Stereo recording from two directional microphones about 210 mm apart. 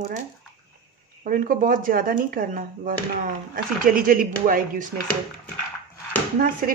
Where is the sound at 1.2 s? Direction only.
40° right (ahead or behind).